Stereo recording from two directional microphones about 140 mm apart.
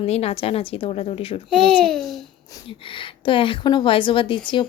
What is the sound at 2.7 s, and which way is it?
A woman's voice, 40° left (ahead or behind).